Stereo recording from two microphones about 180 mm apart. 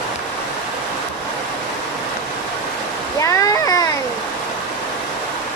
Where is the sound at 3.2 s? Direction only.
20° left (ahead or behind).